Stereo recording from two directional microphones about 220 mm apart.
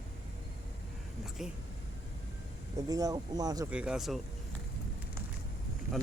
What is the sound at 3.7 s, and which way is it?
Speech, 5° right (ahead or behind).